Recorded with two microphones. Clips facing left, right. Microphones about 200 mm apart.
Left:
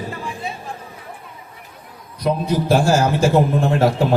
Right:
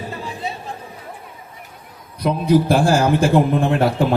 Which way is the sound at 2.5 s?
55° right (ahead or behind).